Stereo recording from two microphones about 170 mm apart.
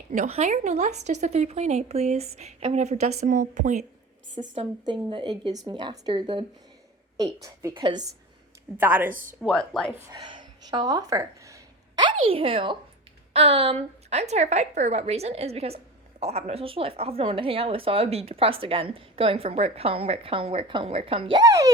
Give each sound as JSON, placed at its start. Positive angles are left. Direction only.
{"t": 0.1, "sound": "a woman's voice", "side_deg": -45}
{"t": 4.4, "sound": "speech", "side_deg": -30}
{"t": 7.7, "sound": "speech", "side_deg": -30}
{"t": 8.8, "sound": "a woman's voice", "side_deg": -10}
{"t": 9.4, "sound": "a woman's voice", "side_deg": 0}
{"t": 10.1, "sound": "a sound", "side_deg": -25}
{"t": 13.3, "sound": "a woman's voice", "side_deg": -35}